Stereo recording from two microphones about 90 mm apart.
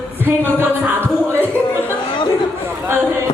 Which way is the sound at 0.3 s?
25° right (ahead or behind).